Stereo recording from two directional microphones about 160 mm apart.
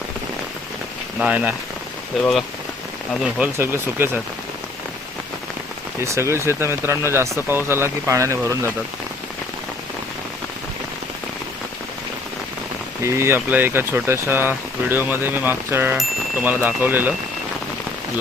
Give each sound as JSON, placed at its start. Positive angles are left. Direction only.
{"t": 1.2, "sound": "speech", "side_deg": -10}
{"t": 3.3, "sound": "speech", "side_deg": -10}
{"t": 6.0, "sound": "speech", "side_deg": -15}
{"t": 13.0, "sound": "speech", "side_deg": -15}